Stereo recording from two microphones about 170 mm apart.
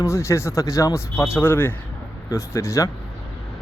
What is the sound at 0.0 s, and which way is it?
Speech, 15° left (ahead or behind).